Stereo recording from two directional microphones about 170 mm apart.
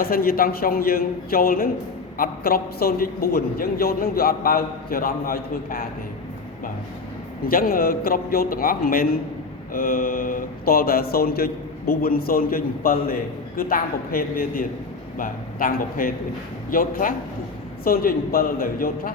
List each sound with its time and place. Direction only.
0.0 s a man's voice: 60° left (ahead or behind)
7.4 s a man's voice: 60° left (ahead or behind)